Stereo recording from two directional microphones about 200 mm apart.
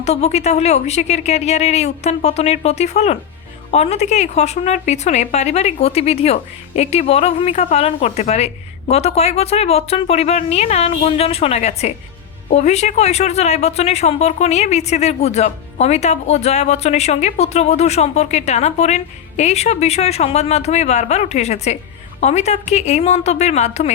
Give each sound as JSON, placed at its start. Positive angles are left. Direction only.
{"t": 0.0, "sound": "speech", "side_deg": 35}